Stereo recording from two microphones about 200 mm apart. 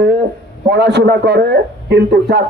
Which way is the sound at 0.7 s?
55° right (ahead or behind).